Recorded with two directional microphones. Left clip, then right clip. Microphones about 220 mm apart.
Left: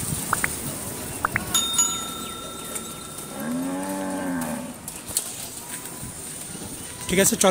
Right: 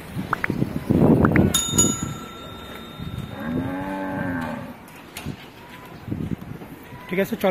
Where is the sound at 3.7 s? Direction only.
5° left (ahead or behind).